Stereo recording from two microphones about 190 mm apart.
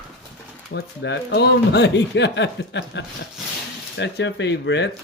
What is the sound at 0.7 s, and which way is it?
Speech, 65° left (ahead or behind).